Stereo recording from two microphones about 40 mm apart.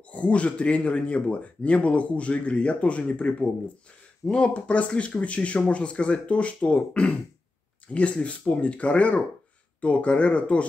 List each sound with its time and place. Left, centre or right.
0.1 s speech: left